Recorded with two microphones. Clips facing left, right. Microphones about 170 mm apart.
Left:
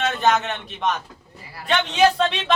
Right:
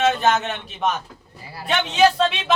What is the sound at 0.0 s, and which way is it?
Speech, centre (ahead or behind).